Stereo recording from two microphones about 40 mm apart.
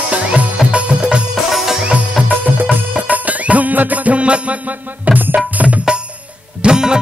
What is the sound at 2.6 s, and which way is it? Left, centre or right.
Music, right.